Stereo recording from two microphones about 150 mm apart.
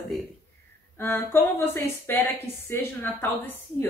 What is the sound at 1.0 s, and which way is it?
Speech, 15° left (ahead or behind).